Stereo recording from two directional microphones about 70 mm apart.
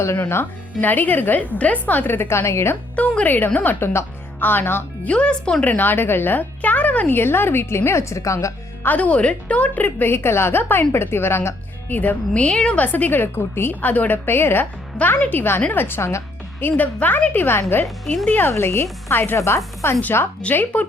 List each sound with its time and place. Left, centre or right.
0.2 s a woman's voice: left
2.9 s a woman's voice: centre
5.0 s speech: centre
5.6 s speech: left
8.8 s a woman's voice: left
12.8 s a woman's voice: left
17.8 s speech: centre
18.3 s speech: left
19.4 s speech: left
20.4 s a woman's voice: left